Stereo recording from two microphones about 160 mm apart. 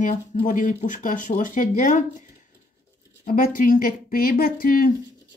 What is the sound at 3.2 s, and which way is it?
Speech, 60° left (ahead or behind).